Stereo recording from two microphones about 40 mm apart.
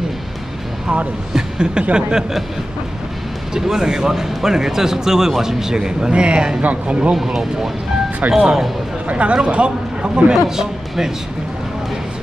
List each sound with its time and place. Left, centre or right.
1.3 s speech: right
3.5 s speech: centre
6.6 s speech: right
7.2 s speech: centre
9.0 s speech: right
10.3 s speech: centre